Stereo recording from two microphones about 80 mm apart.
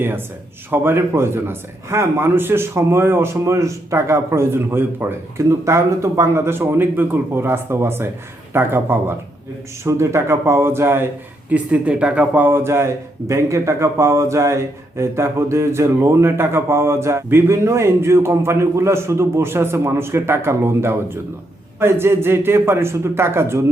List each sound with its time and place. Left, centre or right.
0.7 s speech: right